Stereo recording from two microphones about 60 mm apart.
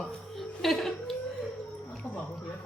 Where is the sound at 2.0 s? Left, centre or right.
Left.